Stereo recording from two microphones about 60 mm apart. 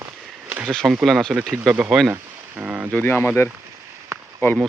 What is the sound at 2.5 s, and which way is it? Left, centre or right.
Speech, right.